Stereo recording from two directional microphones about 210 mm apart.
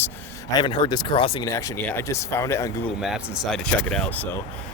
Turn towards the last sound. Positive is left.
turn(degrees=10)  # may be behind; listen again after turning